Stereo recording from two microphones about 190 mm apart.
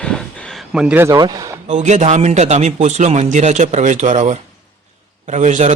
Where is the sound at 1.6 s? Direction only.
40° right (ahead or behind).